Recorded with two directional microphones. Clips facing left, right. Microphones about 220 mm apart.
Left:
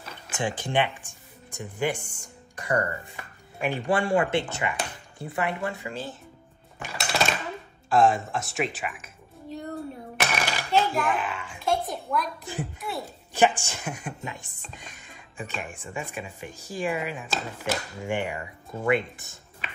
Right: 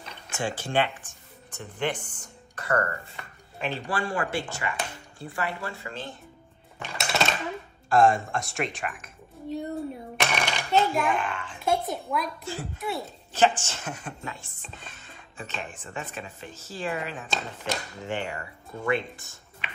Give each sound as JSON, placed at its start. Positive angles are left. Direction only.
{"t": 0.3, "sound": "speech", "side_deg": 15}
{"t": 3.2, "sound": "music", "side_deg": 10}
{"t": 3.9, "sound": "speech", "side_deg": 25}
{"t": 6.8, "sound": "a sound", "side_deg": 0}
{"t": 7.9, "sound": "a woman's voice", "side_deg": 0}
{"t": 10.1, "sound": "coin", "side_deg": 5}
{"t": 11.6, "sound": "a child's voice", "side_deg": 0}
{"t": 13.3, "sound": "speech", "side_deg": 15}
{"t": 19.6, "sound": "a sound", "side_deg": 40}